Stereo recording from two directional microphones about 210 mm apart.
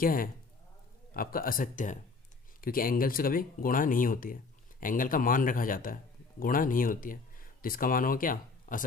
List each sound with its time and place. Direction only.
0.0 s a man's voice: 40° left (ahead or behind)